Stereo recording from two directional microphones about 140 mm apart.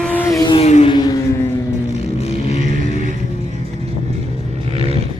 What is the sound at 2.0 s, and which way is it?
Vehicle, 50° left (ahead or behind).